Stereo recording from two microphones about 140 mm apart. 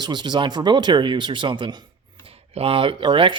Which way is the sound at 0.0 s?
30° right (ahead or behind).